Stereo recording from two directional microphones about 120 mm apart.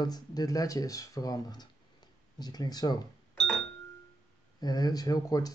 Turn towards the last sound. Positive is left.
turn(degrees=30)  # may be behind; listen again after turning